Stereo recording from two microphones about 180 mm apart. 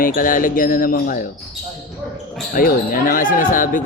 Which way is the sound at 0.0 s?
50° left (ahead or behind).